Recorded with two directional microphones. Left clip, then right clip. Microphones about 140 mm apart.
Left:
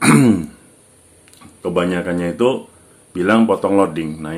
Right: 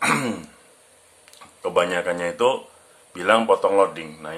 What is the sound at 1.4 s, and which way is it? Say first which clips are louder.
Speech: left 2 dB; centre (ahead or behind).